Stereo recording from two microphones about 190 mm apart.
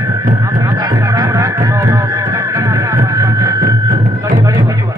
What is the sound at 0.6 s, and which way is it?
Music, 20° right (ahead or behind).